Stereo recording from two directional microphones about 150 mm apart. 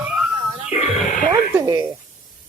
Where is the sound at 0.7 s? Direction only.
40° left (ahead or behind).